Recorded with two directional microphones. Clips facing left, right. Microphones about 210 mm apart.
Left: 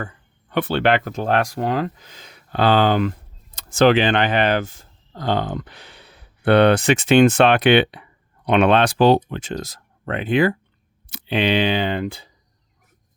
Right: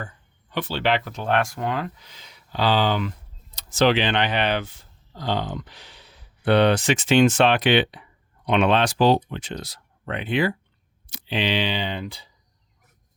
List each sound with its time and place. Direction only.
0.5 s speech: 60° left (ahead or behind)